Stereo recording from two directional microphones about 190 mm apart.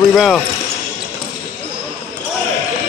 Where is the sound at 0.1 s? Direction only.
Centre (ahead or behind).